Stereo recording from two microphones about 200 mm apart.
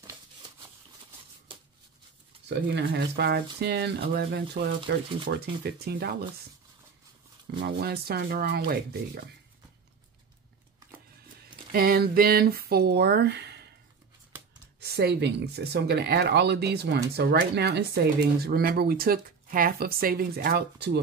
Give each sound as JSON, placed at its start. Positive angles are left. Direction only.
{"t": 2.4, "sound": "speech", "side_deg": -60}
{"t": 7.6, "sound": "speech", "side_deg": -55}
{"t": 11.7, "sound": "speech", "side_deg": -50}
{"t": 14.8, "sound": "speech", "side_deg": -50}